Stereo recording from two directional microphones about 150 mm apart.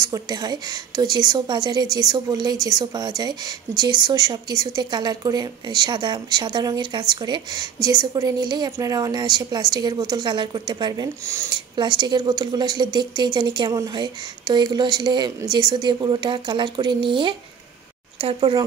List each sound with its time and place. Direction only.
0.0 s speech: 25° right (ahead or behind)